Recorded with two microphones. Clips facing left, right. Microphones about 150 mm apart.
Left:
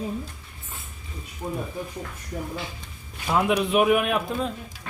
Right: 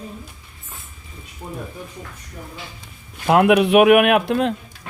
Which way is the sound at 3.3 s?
70° right (ahead or behind).